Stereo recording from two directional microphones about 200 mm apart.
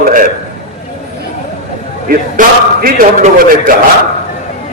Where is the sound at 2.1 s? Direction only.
45° right (ahead or behind).